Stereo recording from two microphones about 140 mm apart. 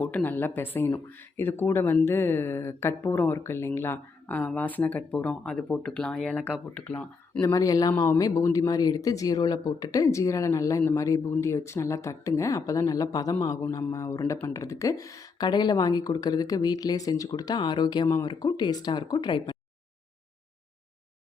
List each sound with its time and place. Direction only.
0.0 s speech: 10° left (ahead or behind)
7.4 s speech: 25° left (ahead or behind)